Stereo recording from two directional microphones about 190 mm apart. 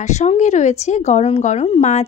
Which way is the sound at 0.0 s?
35° left (ahead or behind).